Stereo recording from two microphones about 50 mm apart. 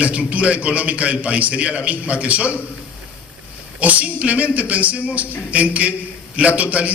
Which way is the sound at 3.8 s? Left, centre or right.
Right.